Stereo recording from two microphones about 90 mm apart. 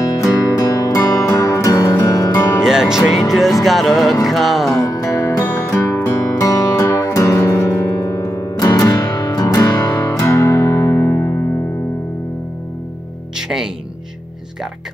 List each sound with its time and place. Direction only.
0.2 s music: 40° left (ahead or behind)
2.6 s music: 5° right (ahead or behind)
4.7 s music: 35° left (ahead or behind)
5.1 s music: 20° left (ahead or behind)
5.9 s music: 35° left (ahead or behind)
10.2 s music: 30° left (ahead or behind)